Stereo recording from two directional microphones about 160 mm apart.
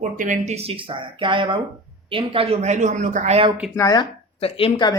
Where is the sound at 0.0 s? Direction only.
50° right (ahead or behind).